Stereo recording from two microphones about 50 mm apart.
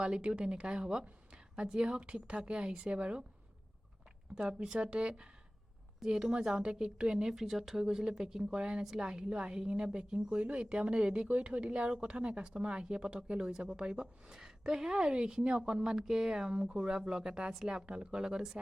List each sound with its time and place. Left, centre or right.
0.0 s speech: centre
4.4 s speech: centre
7.9 s speech: centre